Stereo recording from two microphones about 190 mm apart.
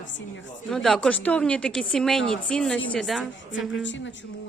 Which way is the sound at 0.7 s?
Centre (ahead or behind).